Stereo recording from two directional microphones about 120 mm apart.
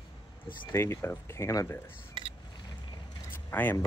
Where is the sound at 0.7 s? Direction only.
20° left (ahead or behind).